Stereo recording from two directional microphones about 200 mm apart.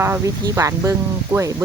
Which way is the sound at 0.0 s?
15° right (ahead or behind).